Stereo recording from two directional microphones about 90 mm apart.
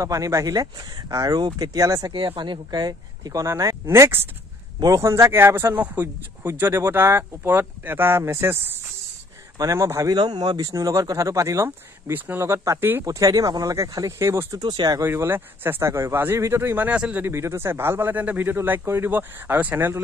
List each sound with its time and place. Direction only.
0.0 s speech: 40° right (ahead or behind)
2.1 s speech: 65° right (ahead or behind); by 3.4 s 45° right (ahead or behind)
3.4 s speech: 35° right (ahead or behind)
4.7 s speech: 40° right (ahead or behind)
9.6 s speech: 35° right (ahead or behind)
10.1 s speech: 50° right (ahead or behind)
10.7 s speech: 35° right (ahead or behind)
13.0 s speech: 40° right (ahead or behind)
14.6 s speech: 60° right (ahead or behind)
15.0 s speech: 30° right (ahead or behind)